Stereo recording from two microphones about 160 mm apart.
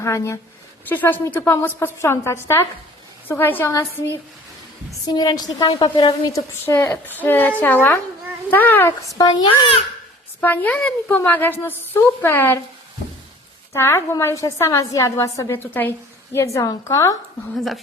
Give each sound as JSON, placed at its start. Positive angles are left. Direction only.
{"t": 0.0, "sound": "a woman's voice", "side_deg": 15}
{"t": 10.4, "sound": "a woman's voice", "side_deg": 10}
{"t": 13.7, "sound": "a woman's voice", "side_deg": 15}